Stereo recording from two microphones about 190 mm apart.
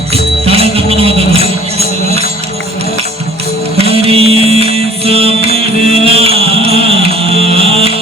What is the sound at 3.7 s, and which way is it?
Music, 30° right (ahead or behind).